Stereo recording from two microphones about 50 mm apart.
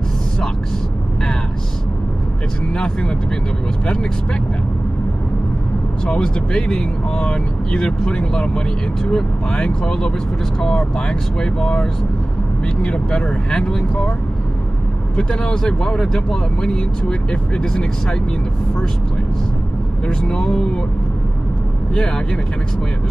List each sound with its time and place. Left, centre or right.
2.7 s speech: centre
6.0 s speech: centre
15.1 s speech: centre
20.1 s speech: centre